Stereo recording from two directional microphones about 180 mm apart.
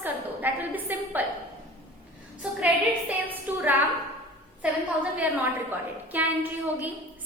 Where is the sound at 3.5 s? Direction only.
10° right (ahead or behind).